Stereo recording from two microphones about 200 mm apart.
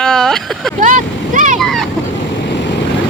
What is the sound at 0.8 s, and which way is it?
Vehicle, 40° right (ahead or behind).